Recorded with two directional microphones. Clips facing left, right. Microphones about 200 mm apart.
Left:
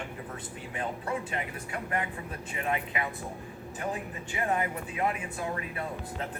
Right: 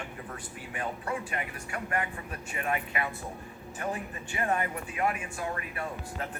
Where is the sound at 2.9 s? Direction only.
20° left (ahead or behind).